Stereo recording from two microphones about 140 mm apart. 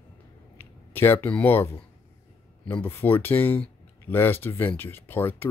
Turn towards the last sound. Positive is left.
turn(degrees=15)  # may be behind; listen again after turning